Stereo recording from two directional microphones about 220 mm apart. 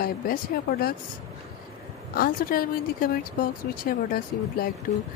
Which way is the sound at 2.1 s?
40° left (ahead or behind).